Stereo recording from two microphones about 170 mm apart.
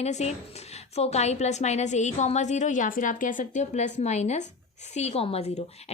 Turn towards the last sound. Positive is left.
turn(degrees=40)  # may be behind; listen again after turning